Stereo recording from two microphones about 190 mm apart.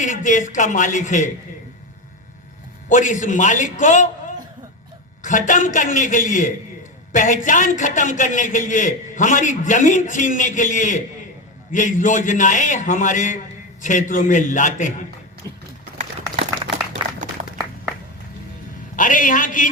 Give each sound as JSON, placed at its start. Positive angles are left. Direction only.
{"t": 0.0, "sound": "a man's voice", "side_deg": 40}
{"t": 2.9, "sound": "a man's voice", "side_deg": 40}
{"t": 5.2, "sound": "a man's voice", "side_deg": 40}
{"t": 18.9, "sound": "a man's voice", "side_deg": 45}